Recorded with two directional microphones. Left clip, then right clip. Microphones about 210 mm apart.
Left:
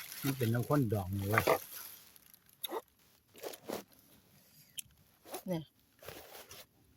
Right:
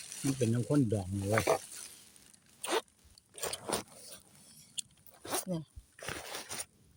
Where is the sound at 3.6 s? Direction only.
45° right (ahead or behind).